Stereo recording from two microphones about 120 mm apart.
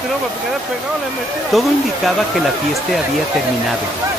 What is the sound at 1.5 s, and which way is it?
Speech, centre (ahead or behind).